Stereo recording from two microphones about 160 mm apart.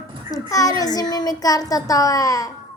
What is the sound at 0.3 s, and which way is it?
A child's voice, 20° left (ahead or behind).